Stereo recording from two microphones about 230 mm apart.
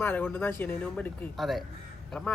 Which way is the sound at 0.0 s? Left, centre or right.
Centre.